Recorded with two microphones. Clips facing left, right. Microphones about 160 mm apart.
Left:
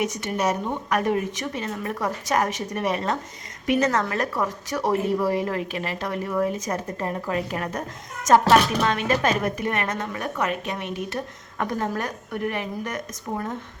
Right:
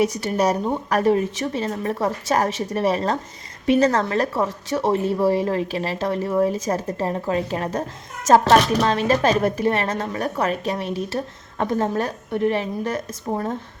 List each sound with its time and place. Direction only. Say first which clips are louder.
0.0 s a woman's voice: right 5 dB; 35° right (ahead or behind)